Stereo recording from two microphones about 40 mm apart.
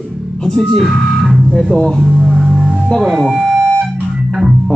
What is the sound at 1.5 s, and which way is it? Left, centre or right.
Speech, centre.